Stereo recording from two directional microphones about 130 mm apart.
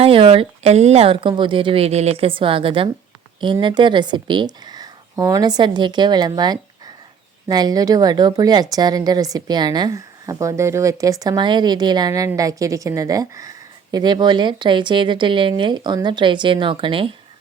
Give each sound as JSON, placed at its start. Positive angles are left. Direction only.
{"t": 0.0, "sound": "a woman's voice", "side_deg": -45}